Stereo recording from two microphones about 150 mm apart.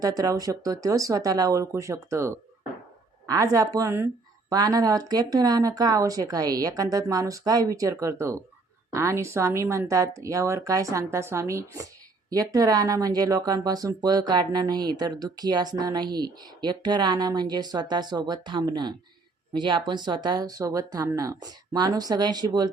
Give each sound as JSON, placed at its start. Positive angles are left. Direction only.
{"t": 0.0, "sound": "speech", "side_deg": -25}